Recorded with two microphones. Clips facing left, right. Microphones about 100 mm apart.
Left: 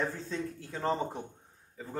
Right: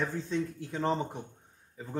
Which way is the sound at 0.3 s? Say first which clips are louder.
Right 4 dB; 20° right (ahead or behind).